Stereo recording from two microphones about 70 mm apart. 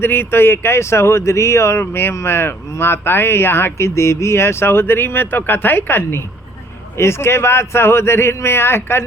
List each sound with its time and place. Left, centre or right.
0.0 s speech: left